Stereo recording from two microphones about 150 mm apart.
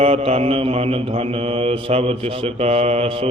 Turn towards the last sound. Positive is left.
turn(degrees=-40)  # may be behind; listen again after turning